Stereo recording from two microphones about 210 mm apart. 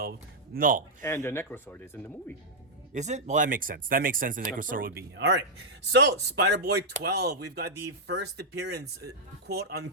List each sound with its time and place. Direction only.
0.0 s a sound: 45° right (ahead or behind)
1.0 s speech: 10° left (ahead or behind)
2.9 s speech: 35° right (ahead or behind); by 9.9 s 50° right (ahead or behind)